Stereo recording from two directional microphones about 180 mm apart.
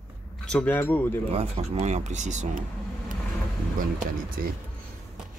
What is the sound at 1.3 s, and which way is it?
Speech, 35° right (ahead or behind).